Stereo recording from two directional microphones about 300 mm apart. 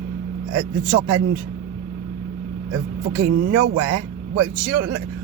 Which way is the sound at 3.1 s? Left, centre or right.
Right.